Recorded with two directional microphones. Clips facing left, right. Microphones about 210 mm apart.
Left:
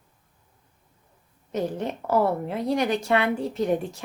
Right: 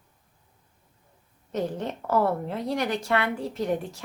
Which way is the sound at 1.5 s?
10° left (ahead or behind).